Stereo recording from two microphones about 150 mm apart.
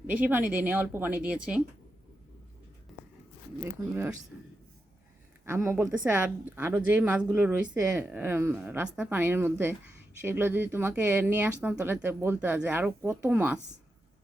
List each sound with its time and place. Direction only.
0.1 s speech: 10° right (ahead or behind)
5.5 s a woman's voice: 15° right (ahead or behind)